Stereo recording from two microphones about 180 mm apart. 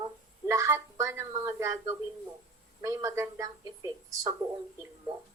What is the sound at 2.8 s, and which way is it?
Speech, 20° right (ahead or behind).